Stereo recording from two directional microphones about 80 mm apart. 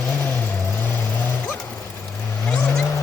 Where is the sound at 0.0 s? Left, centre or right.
Centre.